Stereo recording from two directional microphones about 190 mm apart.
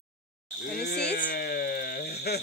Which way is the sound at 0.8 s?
60° left (ahead or behind).